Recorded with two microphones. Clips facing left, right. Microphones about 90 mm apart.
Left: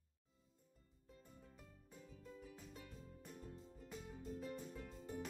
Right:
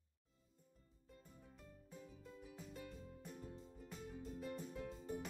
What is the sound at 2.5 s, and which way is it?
Music, centre (ahead or behind).